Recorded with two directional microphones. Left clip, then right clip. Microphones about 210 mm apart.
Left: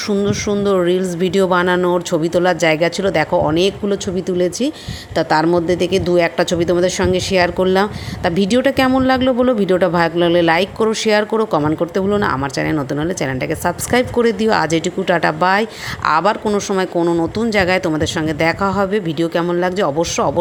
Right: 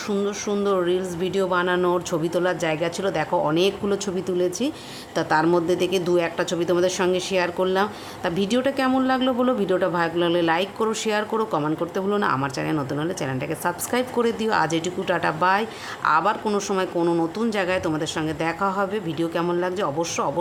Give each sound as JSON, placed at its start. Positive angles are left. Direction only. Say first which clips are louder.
{"t": 0.1, "sound": "speech", "louder": "left 6 dB", "side_deg": 20}
{"t": 17.5, "sound": "speech", "louder": "left 11 dB", "side_deg": 25}